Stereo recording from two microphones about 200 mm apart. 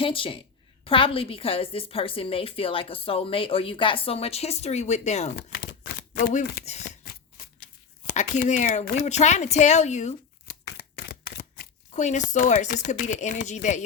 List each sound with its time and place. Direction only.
0.0 s a woman's voice: 25° left (ahead or behind)
7.0 s shuffling cards: 50° left (ahead or behind)
8.0 s speech: 40° left (ahead or behind)
10.8 s speech: 50° left (ahead or behind); by 13.8 s 35° left (ahead or behind)